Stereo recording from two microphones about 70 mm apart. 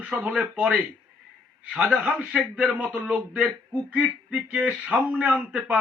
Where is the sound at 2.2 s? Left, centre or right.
Centre.